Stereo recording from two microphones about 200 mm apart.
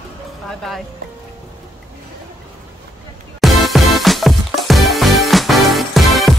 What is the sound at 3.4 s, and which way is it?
Music, centre (ahead or behind).